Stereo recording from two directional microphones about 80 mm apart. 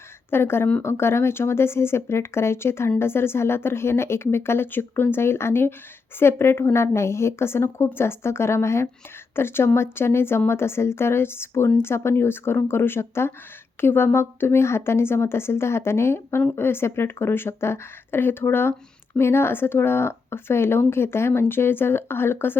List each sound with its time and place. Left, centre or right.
0.3 s a woman's voice: left